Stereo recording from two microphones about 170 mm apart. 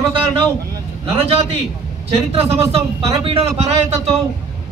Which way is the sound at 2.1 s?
35° right (ahead or behind).